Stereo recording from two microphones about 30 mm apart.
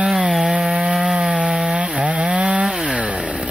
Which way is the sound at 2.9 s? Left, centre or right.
Right.